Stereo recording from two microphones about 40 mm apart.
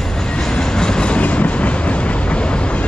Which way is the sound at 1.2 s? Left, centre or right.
Left.